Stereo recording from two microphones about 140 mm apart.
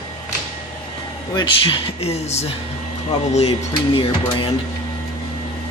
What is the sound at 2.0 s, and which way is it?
Speech, 50° left (ahead or behind).